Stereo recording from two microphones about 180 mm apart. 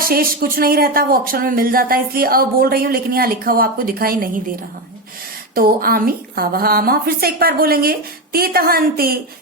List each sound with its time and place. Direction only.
0.0 s speech: 55° right (ahead or behind)
5.5 s speech: 55° right (ahead or behind)